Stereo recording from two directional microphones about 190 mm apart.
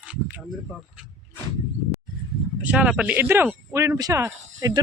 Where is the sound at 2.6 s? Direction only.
5° right (ahead or behind).